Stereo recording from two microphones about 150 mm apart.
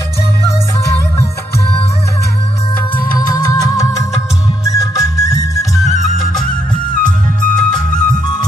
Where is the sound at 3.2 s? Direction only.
25° left (ahead or behind).